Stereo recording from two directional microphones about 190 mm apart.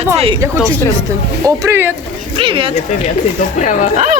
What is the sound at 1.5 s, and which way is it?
Speech, 15° right (ahead or behind).